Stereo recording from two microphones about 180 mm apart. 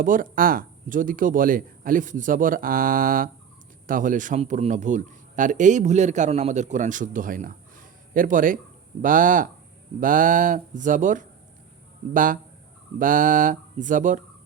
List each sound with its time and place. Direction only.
0.0 s speech: 50° right (ahead or behind)